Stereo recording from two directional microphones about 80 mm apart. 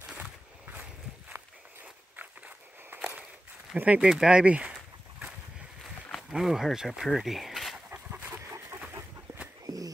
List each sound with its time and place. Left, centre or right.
0.0 s a sound: centre
2.1 s walk: right
3.7 s speech: centre
6.3 s speech: centre
7.9 s dog: right